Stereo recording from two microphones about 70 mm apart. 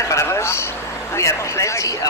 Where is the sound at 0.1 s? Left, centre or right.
Left.